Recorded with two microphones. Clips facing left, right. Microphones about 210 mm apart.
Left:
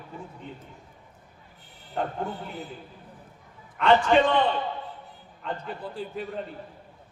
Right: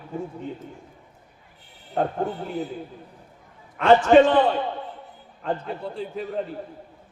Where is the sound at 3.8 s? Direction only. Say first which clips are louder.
Right 5 dB; 45° right (ahead or behind).